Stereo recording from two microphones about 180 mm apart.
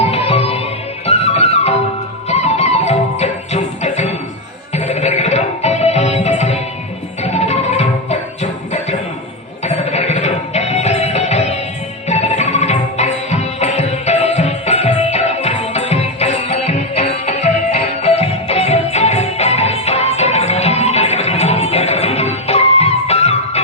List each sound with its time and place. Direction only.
0.0 s music: 35° left (ahead or behind)